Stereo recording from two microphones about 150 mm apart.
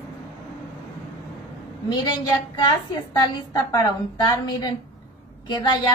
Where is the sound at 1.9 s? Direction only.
25° left (ahead or behind).